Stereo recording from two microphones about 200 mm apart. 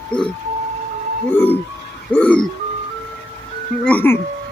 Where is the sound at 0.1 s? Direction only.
5° left (ahead or behind).